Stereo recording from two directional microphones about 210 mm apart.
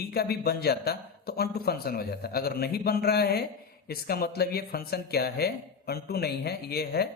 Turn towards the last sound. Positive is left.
turn(degrees=50)  # may be behind; listen again after turning